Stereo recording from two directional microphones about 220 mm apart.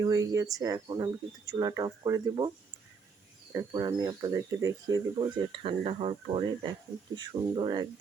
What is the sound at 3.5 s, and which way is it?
Speech, 20° right (ahead or behind).